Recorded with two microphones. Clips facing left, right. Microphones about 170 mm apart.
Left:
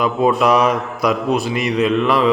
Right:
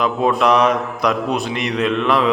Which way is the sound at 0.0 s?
5° left (ahead or behind).